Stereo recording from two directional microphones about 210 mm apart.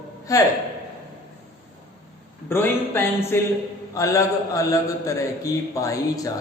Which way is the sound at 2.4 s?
10° left (ahead or behind).